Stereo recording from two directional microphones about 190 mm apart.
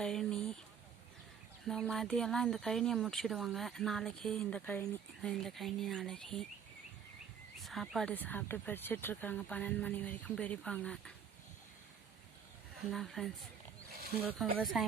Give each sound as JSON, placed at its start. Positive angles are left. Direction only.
{"t": 0.0, "sound": "a sound", "side_deg": 5}
{"t": 1.6, "sound": "speech", "side_deg": 0}
{"t": 7.6, "sound": "speech", "side_deg": 0}
{"t": 12.9, "sound": "speech", "side_deg": 0}